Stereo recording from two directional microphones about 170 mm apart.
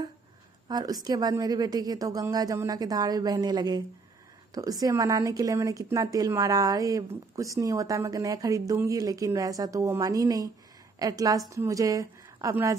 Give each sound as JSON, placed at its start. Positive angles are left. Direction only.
{"t": 0.7, "sound": "a woman's voice", "side_deg": -25}